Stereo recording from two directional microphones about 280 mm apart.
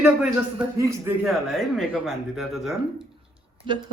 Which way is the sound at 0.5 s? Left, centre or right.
Centre.